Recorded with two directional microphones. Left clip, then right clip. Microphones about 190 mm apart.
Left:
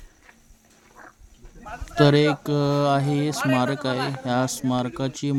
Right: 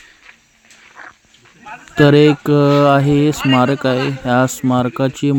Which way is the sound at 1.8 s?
15° right (ahead or behind).